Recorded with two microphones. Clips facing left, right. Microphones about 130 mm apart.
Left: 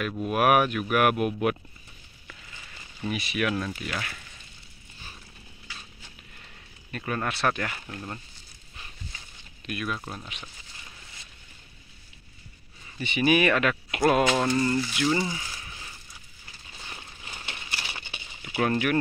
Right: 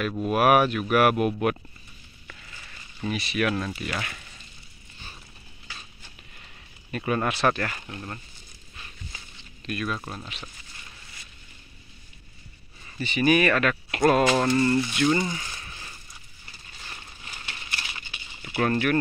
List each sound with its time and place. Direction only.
0.2 s speech: centre (ahead or behind)
3.1 s speech: 5° left (ahead or behind)
6.9 s speech: 10° right (ahead or behind)
7.3 s speech: 5° left (ahead or behind)
9.7 s speech: 10° left (ahead or behind)
13.1 s speech: 15° left (ahead or behind)
15.0 s a sound: 5° left (ahead or behind)
16.9 s a sound: 20° left (ahead or behind)
18.4 s speech: 5° left (ahead or behind)